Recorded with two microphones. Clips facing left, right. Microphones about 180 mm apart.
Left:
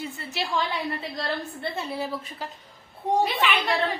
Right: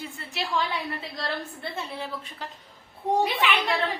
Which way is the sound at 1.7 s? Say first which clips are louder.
Left 3 dB; 5° left (ahead or behind).